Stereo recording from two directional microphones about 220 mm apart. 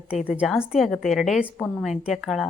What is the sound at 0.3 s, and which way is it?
Speech, 5° right (ahead or behind).